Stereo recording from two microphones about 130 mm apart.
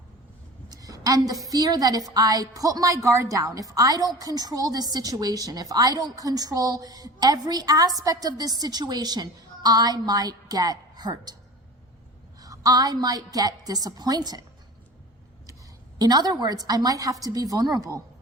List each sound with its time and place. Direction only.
0.7 s a sound: 30° right (ahead or behind)
1.5 s a woman's voice: 30° right (ahead or behind)
12.4 s a woman's voice: 30° right (ahead or behind)
16.0 s a woman's voice: 30° right (ahead or behind)